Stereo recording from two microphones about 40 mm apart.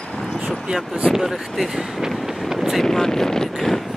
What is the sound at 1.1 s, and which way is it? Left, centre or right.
Speech, centre.